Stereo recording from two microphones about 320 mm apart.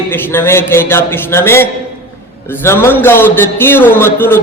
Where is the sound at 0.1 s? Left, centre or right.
Centre.